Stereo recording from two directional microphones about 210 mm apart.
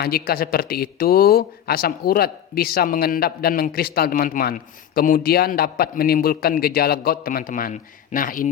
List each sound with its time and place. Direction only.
0.0 s speech: 45° left (ahead or behind)